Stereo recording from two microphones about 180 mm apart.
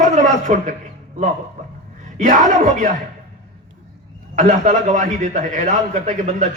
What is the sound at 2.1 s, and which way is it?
Speech, 45° right (ahead or behind).